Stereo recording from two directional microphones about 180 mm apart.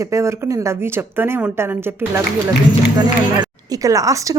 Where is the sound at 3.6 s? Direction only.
20° right (ahead or behind).